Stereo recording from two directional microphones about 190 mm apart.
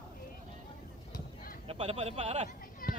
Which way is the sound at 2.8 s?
50° left (ahead or behind).